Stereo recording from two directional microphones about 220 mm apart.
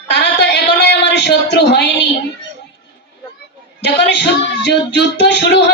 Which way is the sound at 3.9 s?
50° left (ahead or behind).